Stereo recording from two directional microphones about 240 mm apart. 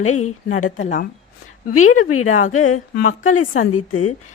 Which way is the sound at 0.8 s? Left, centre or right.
Left.